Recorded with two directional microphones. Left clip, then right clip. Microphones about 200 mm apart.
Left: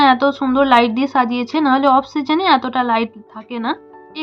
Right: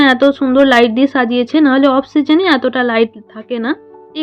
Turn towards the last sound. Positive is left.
turn(degrees=-20)  # may be behind; listen again after turning